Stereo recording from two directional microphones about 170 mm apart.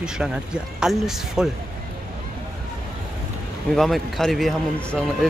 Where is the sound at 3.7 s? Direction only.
Centre (ahead or behind).